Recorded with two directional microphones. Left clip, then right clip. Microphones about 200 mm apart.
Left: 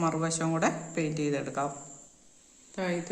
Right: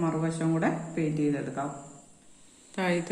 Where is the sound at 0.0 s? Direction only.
35° left (ahead or behind).